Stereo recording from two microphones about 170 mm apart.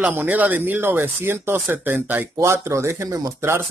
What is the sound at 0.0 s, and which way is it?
Speech, 10° right (ahead or behind).